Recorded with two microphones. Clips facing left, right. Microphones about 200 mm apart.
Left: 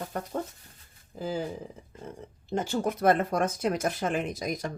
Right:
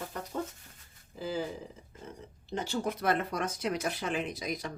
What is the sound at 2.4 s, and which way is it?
Speech, 45° left (ahead or behind).